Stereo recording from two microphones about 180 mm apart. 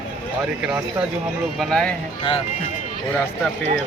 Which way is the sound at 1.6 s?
5° left (ahead or behind).